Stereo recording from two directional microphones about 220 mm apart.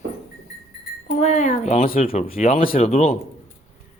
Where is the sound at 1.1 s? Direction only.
35° left (ahead or behind).